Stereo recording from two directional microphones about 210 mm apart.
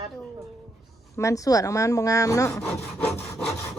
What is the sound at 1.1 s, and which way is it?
A woman's voice, 15° left (ahead or behind).